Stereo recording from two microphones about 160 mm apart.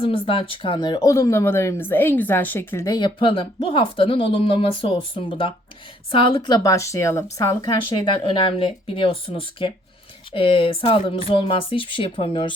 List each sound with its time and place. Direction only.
0.0 s a woman's voice: 35° left (ahead or behind); by 7.5 s 15° left (ahead or behind)
7.6 s speech: 30° left (ahead or behind)